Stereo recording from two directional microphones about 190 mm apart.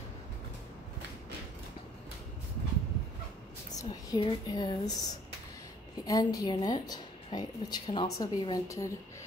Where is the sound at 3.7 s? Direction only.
20° left (ahead or behind).